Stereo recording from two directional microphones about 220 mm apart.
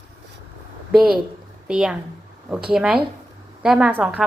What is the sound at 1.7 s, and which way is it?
A woman's voice, 5° right (ahead or behind).